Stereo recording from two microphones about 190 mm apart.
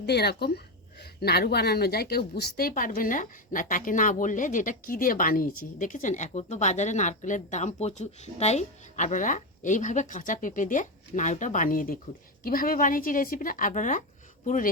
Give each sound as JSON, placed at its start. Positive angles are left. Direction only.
{"t": 0.0, "sound": "a woman's voice", "side_deg": 60}